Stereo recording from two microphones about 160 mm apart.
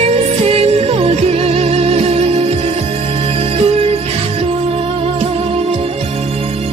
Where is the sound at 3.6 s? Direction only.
40° right (ahead or behind).